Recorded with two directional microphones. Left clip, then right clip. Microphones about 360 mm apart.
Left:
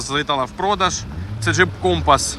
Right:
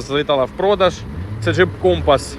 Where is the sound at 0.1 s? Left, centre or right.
Centre.